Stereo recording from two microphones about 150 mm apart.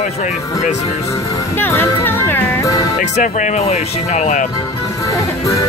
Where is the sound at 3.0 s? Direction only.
55° left (ahead or behind).